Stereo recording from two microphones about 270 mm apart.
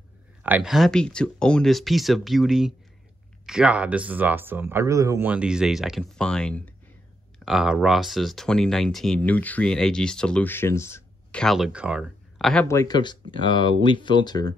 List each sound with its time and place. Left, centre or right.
0.4 s speech: centre